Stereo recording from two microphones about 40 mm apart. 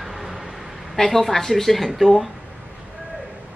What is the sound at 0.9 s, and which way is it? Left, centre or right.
A woman's voice, centre.